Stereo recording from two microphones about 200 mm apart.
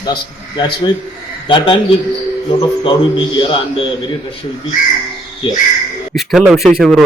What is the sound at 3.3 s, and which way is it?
Speech, 25° left (ahead or behind).